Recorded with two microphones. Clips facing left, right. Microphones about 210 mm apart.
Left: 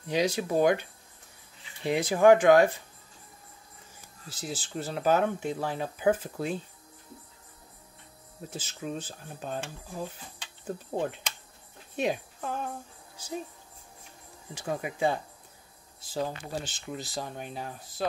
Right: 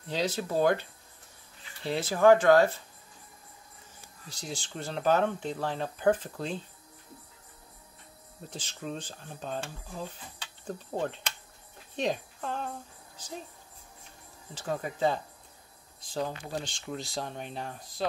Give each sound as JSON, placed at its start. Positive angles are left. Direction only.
{"t": 0.1, "sound": "speech", "side_deg": 10}
{"t": 4.3, "sound": "speech", "side_deg": 5}
{"t": 8.5, "sound": "a woman's voice", "side_deg": 5}
{"t": 14.5, "sound": "speech", "side_deg": 10}